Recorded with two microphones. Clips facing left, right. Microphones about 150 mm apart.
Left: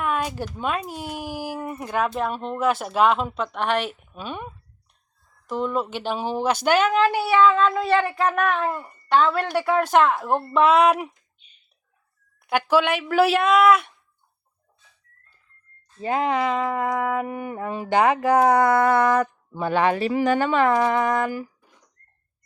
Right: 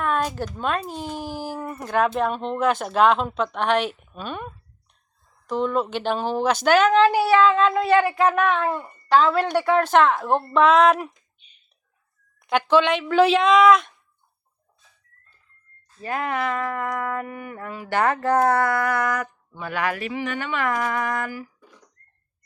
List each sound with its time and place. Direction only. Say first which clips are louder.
0.3 s speech: right 1 dB; 10° left (ahead or behind)
7.7 s a woman's voice: right 2 dB; 10° right (ahead or behind)
8.4 s speech: right 1 dB; 5° left (ahead or behind)
12.4 s speech: right 1 dB; 10° left (ahead or behind)
16.0 s a sound: left 4 dB; 20° left (ahead or behind)